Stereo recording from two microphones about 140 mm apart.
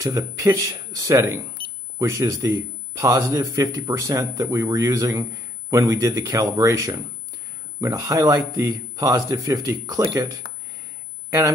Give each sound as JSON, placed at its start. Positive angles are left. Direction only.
{"t": 0.0, "sound": "speech", "side_deg": -25}
{"t": 11.2, "sound": "speech", "side_deg": -20}